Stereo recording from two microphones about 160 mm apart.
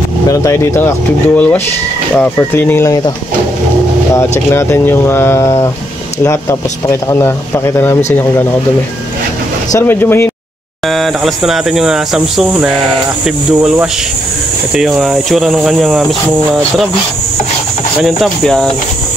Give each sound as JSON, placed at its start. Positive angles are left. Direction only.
{"t": 0.3, "sound": "speech", "side_deg": 20}
{"t": 4.5, "sound": "speech", "side_deg": 15}
{"t": 6.9, "sound": "speech", "side_deg": 15}
{"t": 9.7, "sound": "speech", "side_deg": 15}
{"t": 10.9, "sound": "speech", "side_deg": 0}
{"t": 18.0, "sound": "speech", "side_deg": 0}